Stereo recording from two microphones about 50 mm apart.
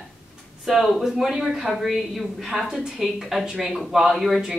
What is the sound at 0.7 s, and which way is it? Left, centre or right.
Speech, centre.